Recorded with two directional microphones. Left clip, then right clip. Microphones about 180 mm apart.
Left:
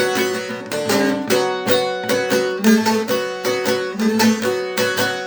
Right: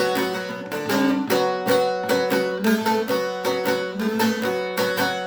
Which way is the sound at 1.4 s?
25° left (ahead or behind).